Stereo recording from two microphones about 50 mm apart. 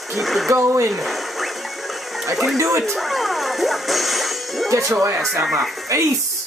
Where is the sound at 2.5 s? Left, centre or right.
Right.